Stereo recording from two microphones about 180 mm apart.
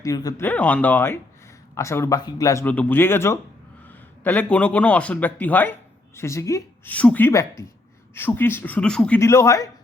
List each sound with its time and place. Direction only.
0.0 s speech: 20° left (ahead or behind)
0.4 s a man's voice: 10° left (ahead or behind)